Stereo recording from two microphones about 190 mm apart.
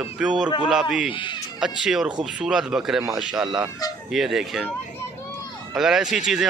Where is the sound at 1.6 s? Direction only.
5° right (ahead or behind).